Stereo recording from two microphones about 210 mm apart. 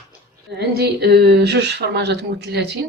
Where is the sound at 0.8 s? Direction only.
50° right (ahead or behind).